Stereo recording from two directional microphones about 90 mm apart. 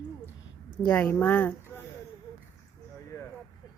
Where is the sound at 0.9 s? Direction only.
20° left (ahead or behind).